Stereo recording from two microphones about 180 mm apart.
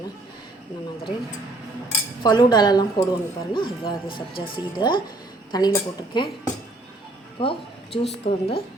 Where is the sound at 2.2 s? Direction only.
25° left (ahead or behind).